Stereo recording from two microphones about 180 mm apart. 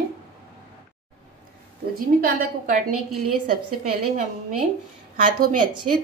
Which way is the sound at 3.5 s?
55° right (ahead or behind).